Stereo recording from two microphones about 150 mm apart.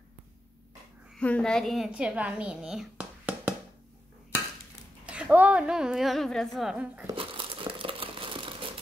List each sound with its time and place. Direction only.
1.1 s a woman's voice: 5° left (ahead or behind); by 3.5 s 10° right (ahead or behind)
5.0 s a woman's voice: 5° right (ahead or behind)
7.2 s crumpling: 35° right (ahead or behind)